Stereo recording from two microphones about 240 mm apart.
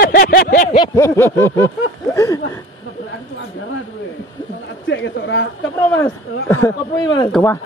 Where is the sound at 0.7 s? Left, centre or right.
Centre.